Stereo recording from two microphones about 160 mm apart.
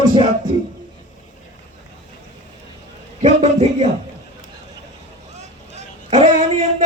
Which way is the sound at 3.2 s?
40° right (ahead or behind).